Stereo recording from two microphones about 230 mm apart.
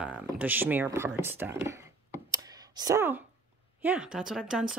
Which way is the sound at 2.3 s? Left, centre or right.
Centre.